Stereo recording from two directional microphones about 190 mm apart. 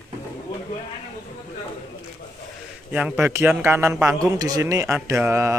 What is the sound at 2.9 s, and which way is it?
Speech, 5° right (ahead or behind).